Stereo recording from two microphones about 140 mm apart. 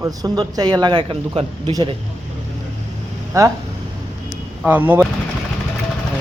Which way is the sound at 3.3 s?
25° right (ahead or behind).